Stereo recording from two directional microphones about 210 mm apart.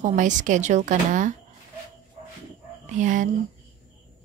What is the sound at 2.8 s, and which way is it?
Speech, 35° right (ahead or behind).